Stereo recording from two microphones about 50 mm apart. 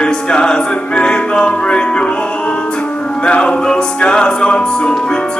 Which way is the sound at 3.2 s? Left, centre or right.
Left.